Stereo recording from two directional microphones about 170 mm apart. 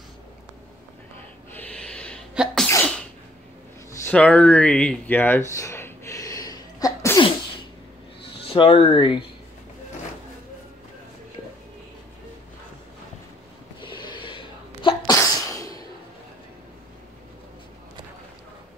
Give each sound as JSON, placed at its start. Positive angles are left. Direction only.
{"t": 1.6, "sound": "a sound", "side_deg": 5}
{"t": 2.3, "sound": "sneeze", "side_deg": 0}
{"t": 4.0, "sound": "speech", "side_deg": 5}
{"t": 5.5, "sound": "sneeze", "side_deg": 15}
{"t": 8.5, "sound": "speech", "side_deg": 35}
{"t": 13.7, "sound": "sneeze", "side_deg": 30}